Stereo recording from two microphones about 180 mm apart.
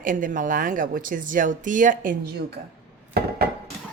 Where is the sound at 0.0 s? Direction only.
50° right (ahead or behind).